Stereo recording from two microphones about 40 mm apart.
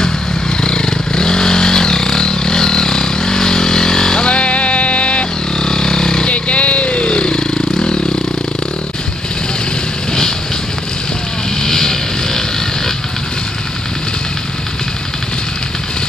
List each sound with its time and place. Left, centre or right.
0.6 s vehicle: centre
4.4 s music: left
5.6 s vehicle: centre
6.2 s vehicle: left
11.6 s vehicle: centre